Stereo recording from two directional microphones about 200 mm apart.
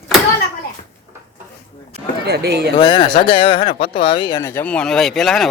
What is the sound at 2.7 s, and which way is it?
Speech, 20° left (ahead or behind).